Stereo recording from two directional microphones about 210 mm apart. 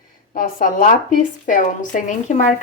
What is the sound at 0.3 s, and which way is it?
Speech, 40° left (ahead or behind).